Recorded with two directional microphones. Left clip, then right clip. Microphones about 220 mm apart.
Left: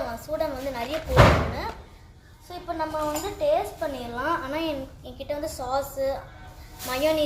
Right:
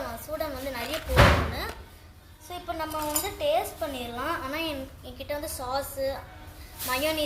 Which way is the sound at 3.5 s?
5° right (ahead or behind).